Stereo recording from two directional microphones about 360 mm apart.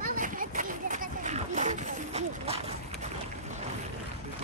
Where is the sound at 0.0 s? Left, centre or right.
Right.